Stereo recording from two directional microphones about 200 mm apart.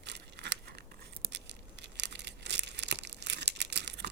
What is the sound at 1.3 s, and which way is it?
Crumpling, 60° right (ahead or behind).